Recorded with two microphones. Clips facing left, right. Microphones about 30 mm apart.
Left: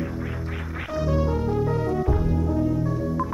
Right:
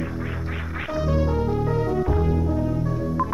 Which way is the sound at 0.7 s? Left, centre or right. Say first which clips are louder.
Right 1 dB; centre.